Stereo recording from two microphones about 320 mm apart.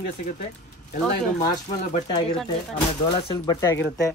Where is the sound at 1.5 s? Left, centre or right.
Centre.